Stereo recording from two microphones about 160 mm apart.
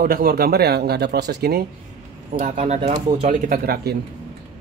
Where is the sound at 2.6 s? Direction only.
40° right (ahead or behind).